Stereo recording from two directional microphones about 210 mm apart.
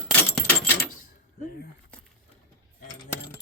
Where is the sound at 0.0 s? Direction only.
5° left (ahead or behind).